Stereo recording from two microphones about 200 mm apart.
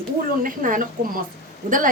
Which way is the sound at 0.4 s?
40° right (ahead or behind).